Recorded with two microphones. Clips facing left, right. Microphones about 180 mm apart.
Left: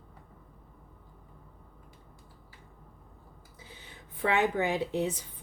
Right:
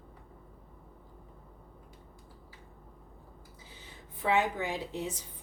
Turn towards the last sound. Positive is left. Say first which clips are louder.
# left 6 dB
turn(degrees=65)  # may be behind; listen again after turning